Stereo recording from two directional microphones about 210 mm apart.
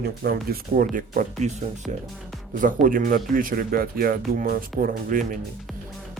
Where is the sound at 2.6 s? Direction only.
40° right (ahead or behind).